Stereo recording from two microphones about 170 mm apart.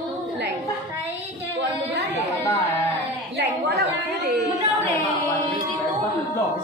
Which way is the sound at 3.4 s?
70° right (ahead or behind).